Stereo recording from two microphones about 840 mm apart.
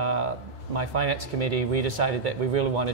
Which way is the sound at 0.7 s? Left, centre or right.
Right.